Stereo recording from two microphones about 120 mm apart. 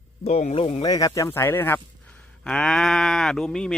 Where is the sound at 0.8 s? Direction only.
30° left (ahead or behind).